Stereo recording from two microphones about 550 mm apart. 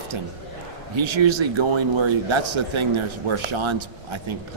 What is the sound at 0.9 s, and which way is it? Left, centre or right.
Speech, right.